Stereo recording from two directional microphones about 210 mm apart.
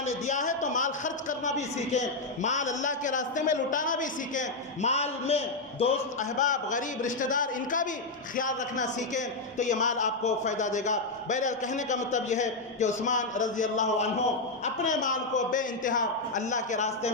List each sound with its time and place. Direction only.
0.3 s a man's voice: 35° left (ahead or behind)